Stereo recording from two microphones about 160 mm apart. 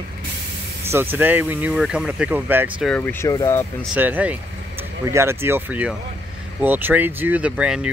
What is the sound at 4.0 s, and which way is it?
Speech, 10° right (ahead or behind).